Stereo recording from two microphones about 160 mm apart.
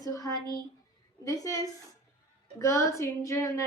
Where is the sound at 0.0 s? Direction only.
20° left (ahead or behind).